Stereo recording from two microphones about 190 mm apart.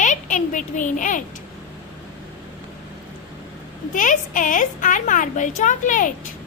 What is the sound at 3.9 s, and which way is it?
A woman's voice, 45° left (ahead or behind).